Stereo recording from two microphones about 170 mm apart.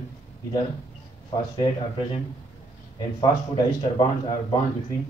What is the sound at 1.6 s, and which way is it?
A man's voice, 30° left (ahead or behind).